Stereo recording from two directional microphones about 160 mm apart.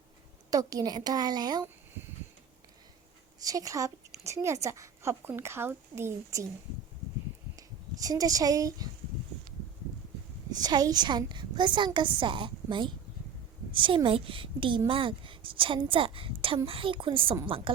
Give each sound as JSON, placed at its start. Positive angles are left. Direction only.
{"t": 0.5, "sound": "a woman's voice", "side_deg": -20}
{"t": 3.4, "sound": "a woman's voice", "side_deg": -20}
{"t": 8.0, "sound": "a woman's voice", "side_deg": -25}
{"t": 10.5, "sound": "a woman's voice", "side_deg": -25}